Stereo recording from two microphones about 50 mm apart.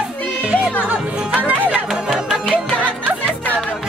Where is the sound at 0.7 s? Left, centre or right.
Right.